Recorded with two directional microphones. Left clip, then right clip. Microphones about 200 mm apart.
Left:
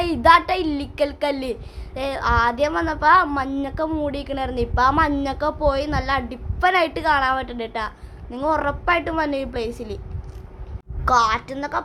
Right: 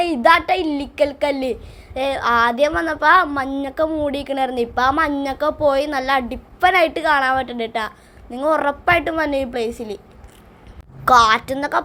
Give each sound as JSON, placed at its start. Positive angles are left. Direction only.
{"t": 0.0, "sound": "a woman's voice", "side_deg": -5}
{"t": 11.0, "sound": "a woman's voice", "side_deg": -20}